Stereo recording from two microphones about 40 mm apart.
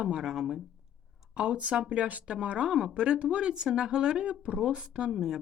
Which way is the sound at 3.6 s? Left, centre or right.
Centre.